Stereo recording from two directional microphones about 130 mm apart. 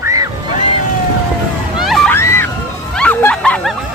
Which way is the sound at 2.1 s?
20° left (ahead or behind).